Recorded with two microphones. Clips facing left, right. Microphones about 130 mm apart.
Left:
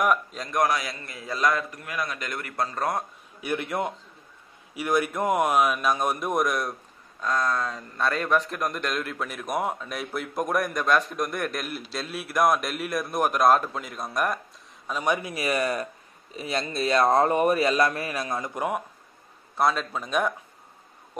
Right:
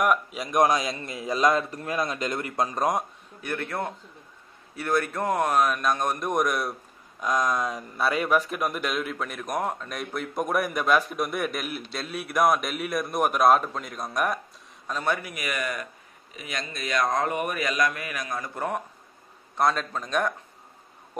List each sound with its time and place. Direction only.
0.0 s a man's voice: 5° right (ahead or behind)
3.3 s speech: 15° left (ahead or behind)
7.2 s a man's voice: 15° right (ahead or behind)
14.9 s speech: 10° left (ahead or behind)
15.3 s a man's voice: 30° left (ahead or behind); by 18.8 s 15° left (ahead or behind)
19.5 s speech: 5° left (ahead or behind)